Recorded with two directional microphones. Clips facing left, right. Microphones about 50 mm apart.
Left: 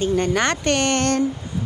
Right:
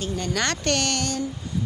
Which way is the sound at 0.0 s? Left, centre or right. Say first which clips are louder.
Left 7 dB; left.